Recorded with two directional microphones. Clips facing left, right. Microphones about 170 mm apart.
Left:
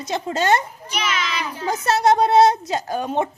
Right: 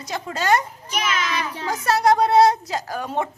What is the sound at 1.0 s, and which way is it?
Speech, 45° right (ahead or behind).